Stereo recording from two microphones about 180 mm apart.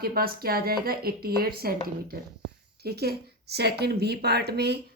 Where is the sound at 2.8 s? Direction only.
60° right (ahead or behind).